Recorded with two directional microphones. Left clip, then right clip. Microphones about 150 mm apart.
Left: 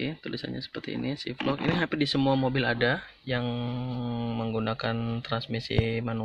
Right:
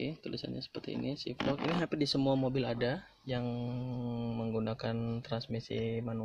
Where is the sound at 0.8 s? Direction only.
10° right (ahead or behind).